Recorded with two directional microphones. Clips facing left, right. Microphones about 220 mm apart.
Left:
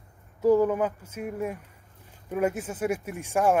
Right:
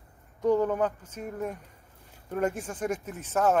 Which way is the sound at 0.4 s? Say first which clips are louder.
Left 3 dB; 5° left (ahead or behind).